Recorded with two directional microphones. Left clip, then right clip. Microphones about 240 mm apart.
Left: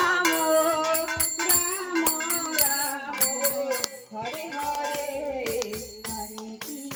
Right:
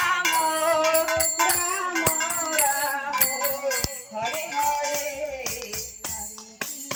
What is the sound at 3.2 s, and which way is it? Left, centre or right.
Music, left.